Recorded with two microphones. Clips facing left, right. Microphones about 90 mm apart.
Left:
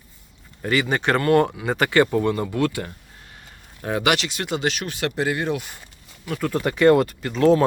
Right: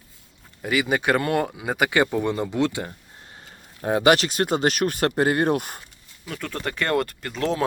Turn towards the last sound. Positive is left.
turn(degrees=0)  # may be behind; listen again after turning